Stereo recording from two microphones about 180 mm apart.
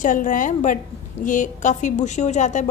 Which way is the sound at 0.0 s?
45° left (ahead or behind).